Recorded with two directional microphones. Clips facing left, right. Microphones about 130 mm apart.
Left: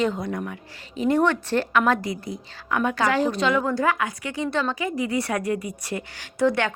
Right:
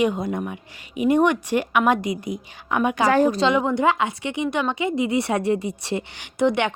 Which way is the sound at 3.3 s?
25° right (ahead or behind).